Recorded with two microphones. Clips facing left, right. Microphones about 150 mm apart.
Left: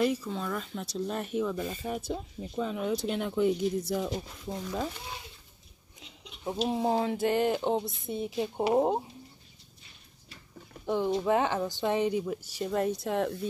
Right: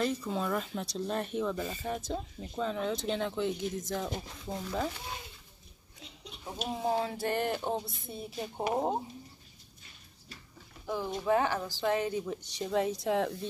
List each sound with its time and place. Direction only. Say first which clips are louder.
0.0 s a woman's voice: left 4 dB; 10° left (ahead or behind)
0.3 s a woman's voice: right 2 dB; 5° right (ahead or behind)
6.4 s a woman's voice: left 5 dB; 25° left (ahead or behind)
10.9 s a woman's voice: left 3 dB; 20° left (ahead or behind); by 13.5 s centre (ahead or behind)